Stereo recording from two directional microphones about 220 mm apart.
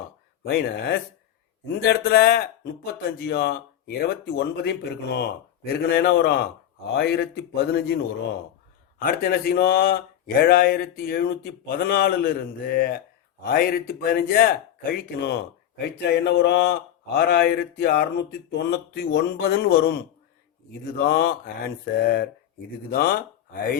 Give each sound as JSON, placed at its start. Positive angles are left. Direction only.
{"t": 0.4, "sound": "speech", "side_deg": 45}
{"t": 9.0, "sound": "speech", "side_deg": 45}